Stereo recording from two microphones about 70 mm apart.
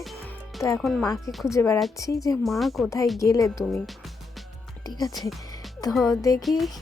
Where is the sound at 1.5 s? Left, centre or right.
Left.